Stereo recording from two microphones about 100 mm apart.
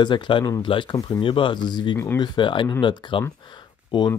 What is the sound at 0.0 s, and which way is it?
Speech, 50° left (ahead or behind).